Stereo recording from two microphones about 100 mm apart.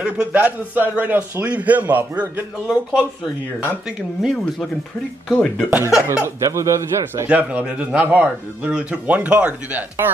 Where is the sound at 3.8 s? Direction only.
Centre (ahead or behind).